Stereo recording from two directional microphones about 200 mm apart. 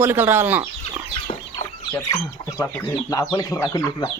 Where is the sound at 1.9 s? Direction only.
15° left (ahead or behind).